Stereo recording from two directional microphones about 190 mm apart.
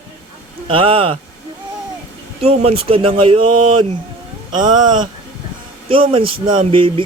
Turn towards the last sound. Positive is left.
turn(degrees=-25)  # may be behind; listen again after turning